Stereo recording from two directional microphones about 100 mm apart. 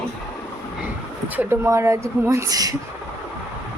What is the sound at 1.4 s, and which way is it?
Speech, 25° right (ahead or behind).